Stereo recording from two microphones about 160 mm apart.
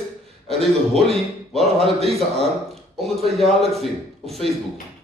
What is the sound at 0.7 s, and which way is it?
Speech, centre (ahead or behind).